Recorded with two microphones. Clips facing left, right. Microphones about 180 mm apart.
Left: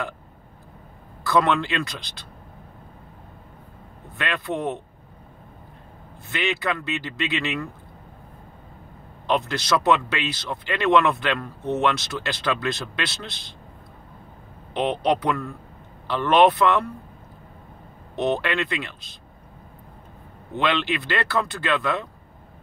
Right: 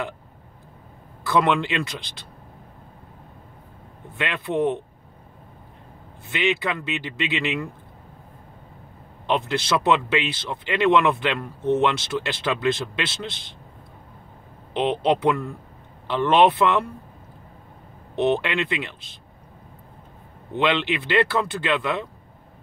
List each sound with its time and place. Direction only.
1.3 s speech: 20° right (ahead or behind)
4.2 s speech: 20° right (ahead or behind)
6.3 s speech: 20° right (ahead or behind)
9.3 s speech: 25° right (ahead or behind)
14.7 s speech: 20° right (ahead or behind)
18.1 s speech: 25° right (ahead or behind)
20.5 s speech: 20° right (ahead or behind)